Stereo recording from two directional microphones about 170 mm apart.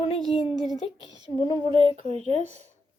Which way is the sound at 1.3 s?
30° left (ahead or behind).